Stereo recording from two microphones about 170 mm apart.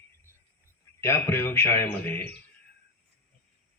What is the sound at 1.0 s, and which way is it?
A man's voice, 15° left (ahead or behind).